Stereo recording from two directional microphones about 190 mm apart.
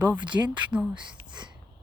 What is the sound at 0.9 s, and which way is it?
Speech, 25° right (ahead or behind).